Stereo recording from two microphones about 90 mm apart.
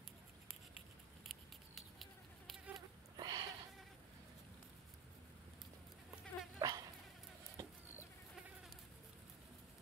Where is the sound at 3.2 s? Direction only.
50° right (ahead or behind).